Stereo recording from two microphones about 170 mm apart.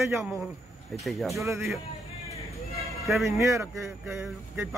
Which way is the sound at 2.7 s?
Centre (ahead or behind).